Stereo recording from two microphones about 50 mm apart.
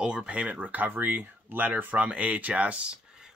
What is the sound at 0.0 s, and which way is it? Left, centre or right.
Speech, centre.